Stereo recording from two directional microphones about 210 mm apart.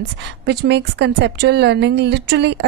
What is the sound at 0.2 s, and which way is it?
A woman's voice, 55° right (ahead or behind).